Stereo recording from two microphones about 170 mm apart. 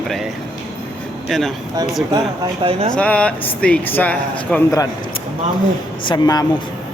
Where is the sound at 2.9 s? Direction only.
5° left (ahead or behind).